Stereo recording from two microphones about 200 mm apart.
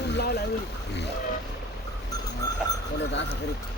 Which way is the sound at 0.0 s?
55° left (ahead or behind).